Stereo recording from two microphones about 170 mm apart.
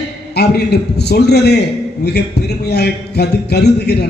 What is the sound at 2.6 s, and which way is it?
A man's voice, 75° left (ahead or behind).